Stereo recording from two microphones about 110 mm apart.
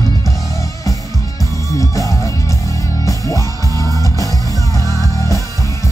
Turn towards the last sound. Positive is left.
turn(degrees=30)  # may be behind; listen again after turning